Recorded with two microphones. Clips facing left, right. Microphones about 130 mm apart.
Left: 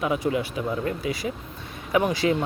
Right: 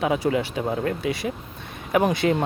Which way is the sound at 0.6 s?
50° right (ahead or behind).